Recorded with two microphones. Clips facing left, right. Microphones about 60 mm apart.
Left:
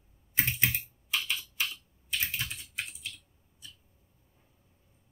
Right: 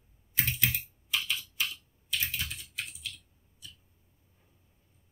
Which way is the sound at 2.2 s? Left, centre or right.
Left.